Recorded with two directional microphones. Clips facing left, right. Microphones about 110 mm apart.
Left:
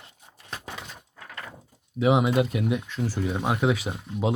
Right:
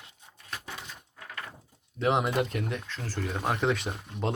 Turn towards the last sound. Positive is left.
turn(degrees=5)  # may be behind; listen again after turning